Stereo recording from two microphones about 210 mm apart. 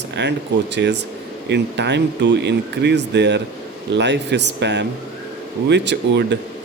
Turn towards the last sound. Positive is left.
turn(degrees=-55)  # may be behind; listen again after turning